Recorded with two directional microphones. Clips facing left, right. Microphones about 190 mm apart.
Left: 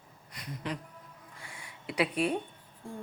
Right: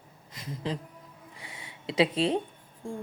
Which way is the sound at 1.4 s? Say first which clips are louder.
Right 2 dB; 20° right (ahead or behind).